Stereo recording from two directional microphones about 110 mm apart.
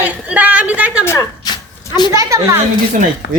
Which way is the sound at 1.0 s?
20° left (ahead or behind).